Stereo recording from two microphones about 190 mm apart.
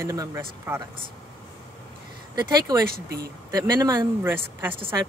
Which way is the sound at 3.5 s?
20° right (ahead or behind).